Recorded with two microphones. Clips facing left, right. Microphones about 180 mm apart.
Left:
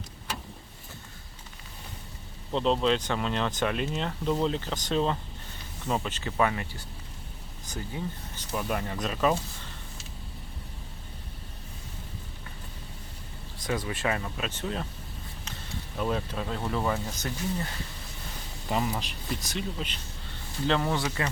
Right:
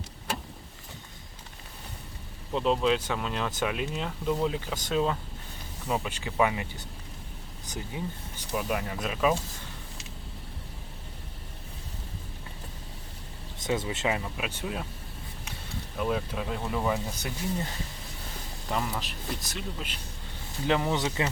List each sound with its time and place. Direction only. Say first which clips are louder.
2.5 s speech: even; 5° right (ahead or behind)
8.5 s speech: even; 5° right (ahead or behind)
13.6 s speech: right 1 dB; 25° right (ahead or behind)
16.0 s speech: even; 5° right (ahead or behind)
18.7 s speech: left 2 dB; 5° left (ahead or behind); by 21.2 s 20° right (ahead or behind)